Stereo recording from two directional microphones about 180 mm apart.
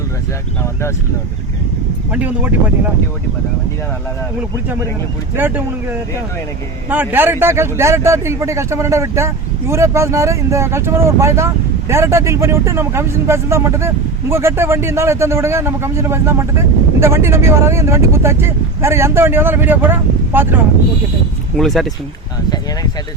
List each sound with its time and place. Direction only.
0.6 s speech: 15° left (ahead or behind)
2.1 s speech: 10° right (ahead or behind)
5.4 s speech: 10° right (ahead or behind)
6.9 s speech: 10° right (ahead or behind)
21.5 s speech: centre (ahead or behind)
22.4 s speech: 25° left (ahead or behind)